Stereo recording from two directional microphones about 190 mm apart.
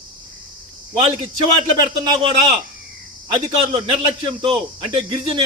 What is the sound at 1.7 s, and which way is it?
Speech, 25° right (ahead or behind).